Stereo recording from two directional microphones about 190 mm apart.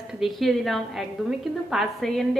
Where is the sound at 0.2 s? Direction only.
Centre (ahead or behind).